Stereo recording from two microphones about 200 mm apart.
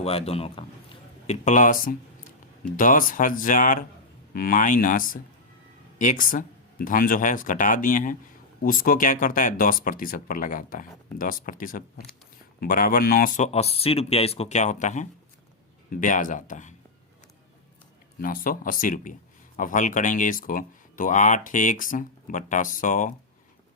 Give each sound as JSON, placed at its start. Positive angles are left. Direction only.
{"t": 0.0, "sound": "a man's voice", "side_deg": 30}
{"t": 18.2, "sound": "speech", "side_deg": 45}